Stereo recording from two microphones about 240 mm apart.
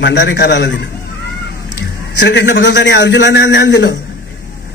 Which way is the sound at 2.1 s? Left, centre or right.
Left.